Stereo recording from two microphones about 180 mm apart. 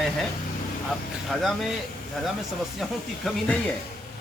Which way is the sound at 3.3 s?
Centre (ahead or behind).